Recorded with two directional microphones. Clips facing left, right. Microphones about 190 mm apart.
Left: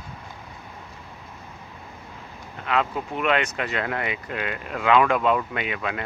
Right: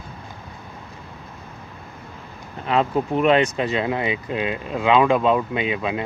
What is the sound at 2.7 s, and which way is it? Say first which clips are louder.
Speech: right 5 dB; 35° right (ahead or behind).